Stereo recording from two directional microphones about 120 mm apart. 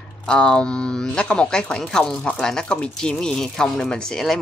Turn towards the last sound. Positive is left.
turn(degrees=5)  # may be behind; listen again after turning